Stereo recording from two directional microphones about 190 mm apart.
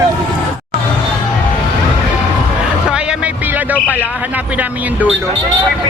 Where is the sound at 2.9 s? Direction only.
5° right (ahead or behind).